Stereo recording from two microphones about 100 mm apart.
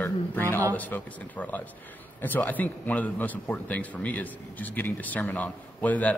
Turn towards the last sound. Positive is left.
turn(degrees=15)  # may be behind; listen again after turning